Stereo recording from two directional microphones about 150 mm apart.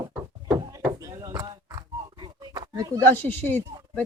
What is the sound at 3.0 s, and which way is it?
Speech, 10° left (ahead or behind).